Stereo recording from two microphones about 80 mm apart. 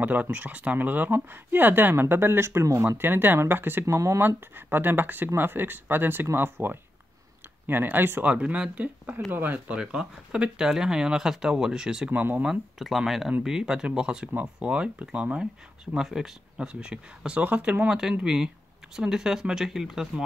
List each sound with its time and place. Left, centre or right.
0.0 s speech: centre
3.8 s speech: right
4.3 s speech: right
9.8 s speech: centre
12.1 s speech: right
12.4 s speech: centre